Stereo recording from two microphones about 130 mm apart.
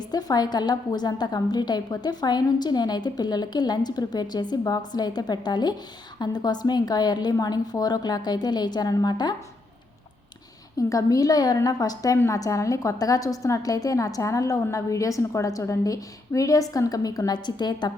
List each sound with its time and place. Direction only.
0.0 s a woman's voice: 30° left (ahead or behind)
10.8 s a woman's voice: 25° left (ahead or behind)